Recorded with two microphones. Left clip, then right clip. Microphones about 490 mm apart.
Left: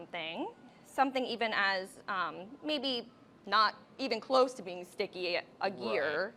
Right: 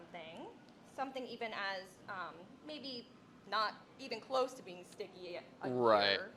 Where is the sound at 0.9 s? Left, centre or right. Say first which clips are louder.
Left 12 dB; left.